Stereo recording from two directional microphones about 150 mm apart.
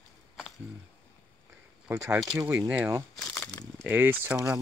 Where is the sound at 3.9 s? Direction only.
10° right (ahead or behind).